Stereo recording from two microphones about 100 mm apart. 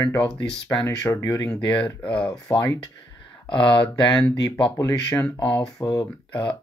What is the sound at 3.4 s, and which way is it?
Speech, 55° left (ahead or behind).